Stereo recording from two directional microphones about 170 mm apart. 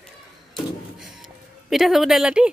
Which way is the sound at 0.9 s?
Centre (ahead or behind).